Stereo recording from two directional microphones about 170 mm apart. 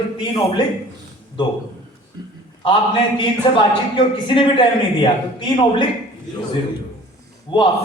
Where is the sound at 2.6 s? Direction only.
30° left (ahead or behind).